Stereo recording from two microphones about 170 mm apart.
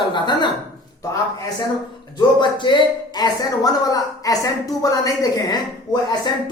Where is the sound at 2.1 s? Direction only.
25° left (ahead or behind).